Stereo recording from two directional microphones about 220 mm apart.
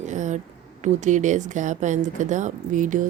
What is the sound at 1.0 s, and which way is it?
Speech, 35° right (ahead or behind).